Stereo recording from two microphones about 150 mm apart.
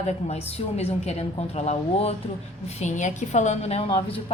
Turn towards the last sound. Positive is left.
turn(degrees=40)  # may be behind; listen again after turning